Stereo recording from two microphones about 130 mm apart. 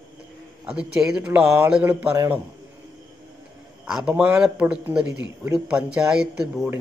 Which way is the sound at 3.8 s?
5° right (ahead or behind).